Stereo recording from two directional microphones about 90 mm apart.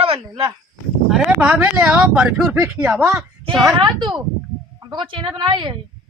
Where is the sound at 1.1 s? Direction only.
5° right (ahead or behind).